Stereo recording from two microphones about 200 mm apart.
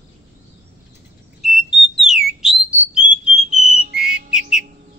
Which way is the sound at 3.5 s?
40° right (ahead or behind).